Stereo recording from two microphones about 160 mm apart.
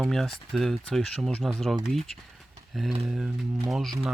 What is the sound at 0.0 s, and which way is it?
Speech, centre (ahead or behind).